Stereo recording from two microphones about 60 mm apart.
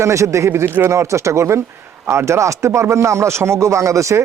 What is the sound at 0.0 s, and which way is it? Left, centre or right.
Speech, right.